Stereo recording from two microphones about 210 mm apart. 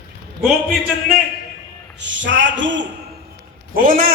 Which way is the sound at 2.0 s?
60° right (ahead or behind).